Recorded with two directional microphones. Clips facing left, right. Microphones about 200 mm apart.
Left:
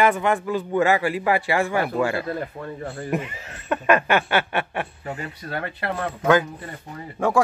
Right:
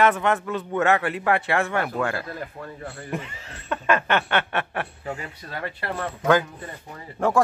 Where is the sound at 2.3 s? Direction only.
30° left (ahead or behind).